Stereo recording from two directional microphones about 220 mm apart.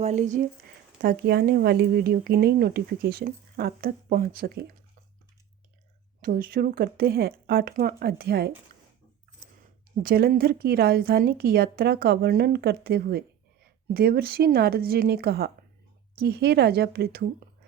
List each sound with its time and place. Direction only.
0.0 s speech: 30° right (ahead or behind)
1.0 s speech: 45° right (ahead or behind)
6.2 s speech: 40° right (ahead or behind)
10.0 s speech: 40° right (ahead or behind)